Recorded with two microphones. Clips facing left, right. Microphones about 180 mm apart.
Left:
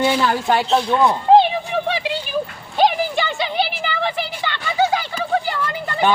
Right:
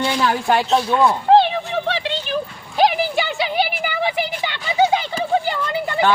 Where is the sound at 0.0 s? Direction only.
5° left (ahead or behind).